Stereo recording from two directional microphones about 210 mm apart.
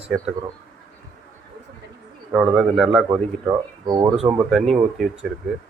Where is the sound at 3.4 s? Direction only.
15° right (ahead or behind).